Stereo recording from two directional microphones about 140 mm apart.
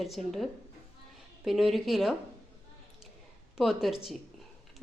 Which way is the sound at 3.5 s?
Centre (ahead or behind).